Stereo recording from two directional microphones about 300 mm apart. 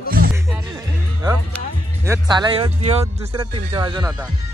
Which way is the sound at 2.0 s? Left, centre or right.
Centre.